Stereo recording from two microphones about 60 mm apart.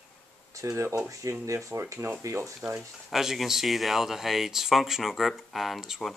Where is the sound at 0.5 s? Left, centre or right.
Right.